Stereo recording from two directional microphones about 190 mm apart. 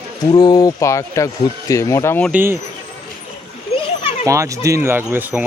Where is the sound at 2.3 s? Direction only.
10° right (ahead or behind).